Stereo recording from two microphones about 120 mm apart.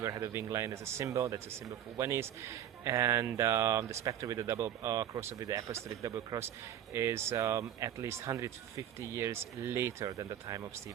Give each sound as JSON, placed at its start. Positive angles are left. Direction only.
{"t": 0.0, "sound": "speech", "side_deg": -25}